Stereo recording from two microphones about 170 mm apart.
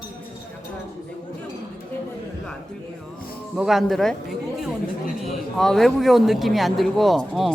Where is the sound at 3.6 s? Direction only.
Centre (ahead or behind).